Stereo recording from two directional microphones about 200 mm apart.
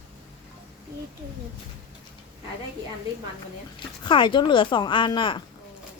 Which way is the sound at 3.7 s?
25° left (ahead or behind).